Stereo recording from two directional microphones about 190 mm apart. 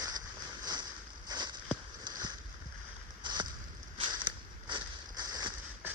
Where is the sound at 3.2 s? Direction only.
25° right (ahead or behind).